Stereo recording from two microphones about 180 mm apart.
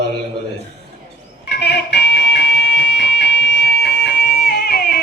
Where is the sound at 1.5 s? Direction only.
65° left (ahead or behind).